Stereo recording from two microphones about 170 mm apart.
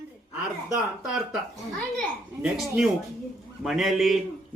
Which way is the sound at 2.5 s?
Centre (ahead or behind).